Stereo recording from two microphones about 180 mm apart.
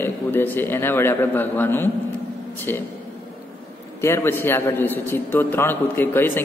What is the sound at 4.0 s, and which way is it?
A man's voice, 15° left (ahead or behind).